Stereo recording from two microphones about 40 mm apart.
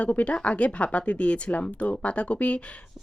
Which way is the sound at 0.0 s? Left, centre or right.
Left.